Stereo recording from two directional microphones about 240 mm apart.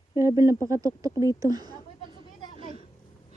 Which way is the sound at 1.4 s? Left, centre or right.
Centre.